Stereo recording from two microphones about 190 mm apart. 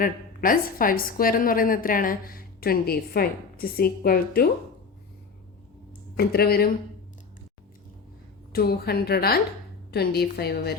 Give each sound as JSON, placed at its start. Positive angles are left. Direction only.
{"t": 0.0, "sound": "a woman's voice", "side_deg": 45}
{"t": 6.1, "sound": "a woman's voice", "side_deg": 55}
{"t": 8.5, "sound": "a woman's voice", "side_deg": 55}